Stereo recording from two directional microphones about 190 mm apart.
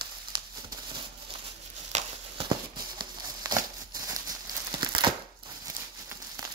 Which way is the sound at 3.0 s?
20° right (ahead or behind).